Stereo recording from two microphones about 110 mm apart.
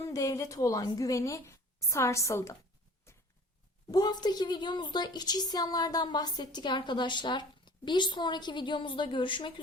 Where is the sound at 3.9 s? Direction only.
35° left (ahead or behind).